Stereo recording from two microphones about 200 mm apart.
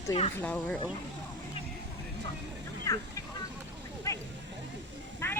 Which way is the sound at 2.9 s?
15° left (ahead or behind).